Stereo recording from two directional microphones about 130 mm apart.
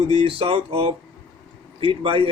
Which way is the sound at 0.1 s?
45° right (ahead or behind).